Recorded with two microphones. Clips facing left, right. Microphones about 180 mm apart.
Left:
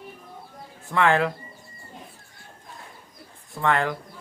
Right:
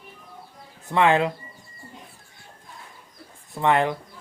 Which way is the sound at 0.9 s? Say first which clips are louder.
Right 2 dB; 20° right (ahead or behind).